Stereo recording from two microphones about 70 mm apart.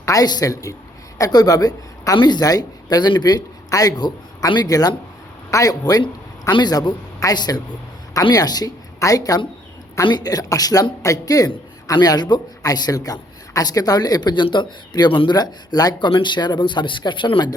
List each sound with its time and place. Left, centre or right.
0.0 s a woman's voice: left
3.7 s a man's voice: left
5.5 s a man's voice: left
6.6 s speech: left
9.0 s a woman's voice: left
10.1 s a man's voice: left